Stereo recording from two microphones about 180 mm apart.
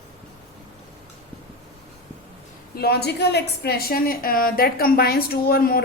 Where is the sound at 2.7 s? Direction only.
60° left (ahead or behind).